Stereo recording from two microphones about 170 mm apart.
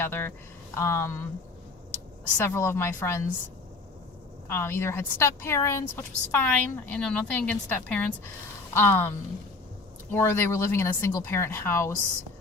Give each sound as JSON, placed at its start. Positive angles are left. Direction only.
{"t": 0.0, "sound": "a woman's voice", "side_deg": 15}
{"t": 2.4, "sound": "a woman's voice", "side_deg": 15}
{"t": 4.4, "sound": "a woman's voice", "side_deg": 15}